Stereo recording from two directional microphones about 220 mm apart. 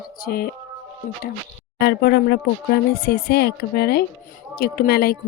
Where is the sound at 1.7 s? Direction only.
45° left (ahead or behind).